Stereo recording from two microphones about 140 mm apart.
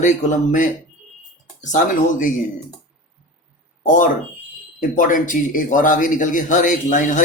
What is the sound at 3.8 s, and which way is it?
A man's voice, 65° left (ahead or behind).